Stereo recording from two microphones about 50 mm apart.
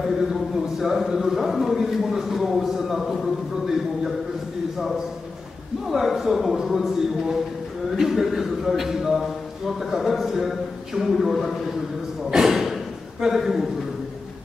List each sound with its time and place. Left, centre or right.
0.3 s a man's voice: centre
5.9 s speech: centre
12.3 s a sound: centre